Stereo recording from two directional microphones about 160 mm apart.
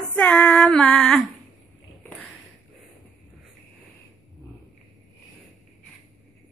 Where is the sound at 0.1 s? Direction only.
10° left (ahead or behind).